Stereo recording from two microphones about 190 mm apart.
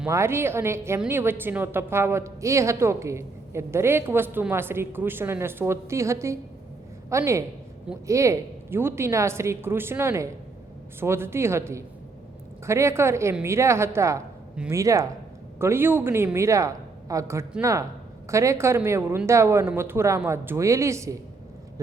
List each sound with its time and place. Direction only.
0.1 s a woman's voice: 15° right (ahead or behind)